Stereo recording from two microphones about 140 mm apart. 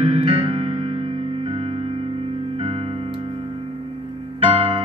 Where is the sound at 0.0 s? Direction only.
45° right (ahead or behind).